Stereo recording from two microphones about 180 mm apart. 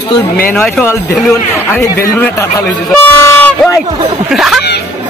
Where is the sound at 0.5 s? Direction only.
10° left (ahead or behind).